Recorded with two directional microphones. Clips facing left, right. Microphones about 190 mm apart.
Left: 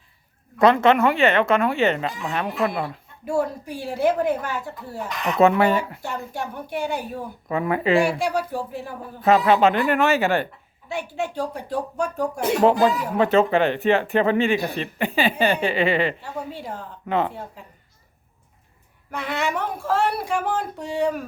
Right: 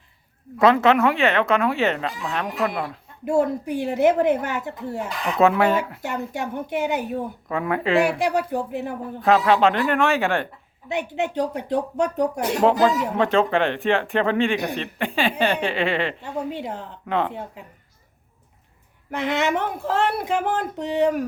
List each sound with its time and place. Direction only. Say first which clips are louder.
0.6 s speech: even; centre (ahead or behind)
3.2 s speech: right 3 dB; 20° right (ahead or behind)
5.4 s speech: left 1 dB; centre (ahead or behind)
6.0 s speech: right 2 dB; 20° right (ahead or behind)
7.4 s speech: left 4 dB; centre (ahead or behind)
8.2 s speech: right 2 dB; 20° right (ahead or behind)
9.2 s speech: left 1 dB; 5° left (ahead or behind)
10.8 s speech: right 3 dB; 20° right (ahead or behind)
12.6 s speech: even; 5° left (ahead or behind)
16.5 s speech: right 3 dB; 20° right (ahead or behind)
17.1 s speech: left 1 dB; 5° left (ahead or behind)
17.3 s a woman's voice: right 2 dB; 15° right (ahead or behind)
19.1 s speech: right 3 dB; 20° right (ahead or behind)